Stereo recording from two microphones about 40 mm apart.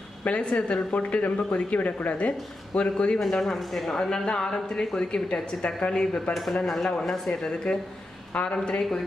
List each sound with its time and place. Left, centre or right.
0.2 s speech: left
3.2 s speech: centre
3.9 s a woman's voice: centre
6.5 s a woman's voice: centre
8.5 s speech: centre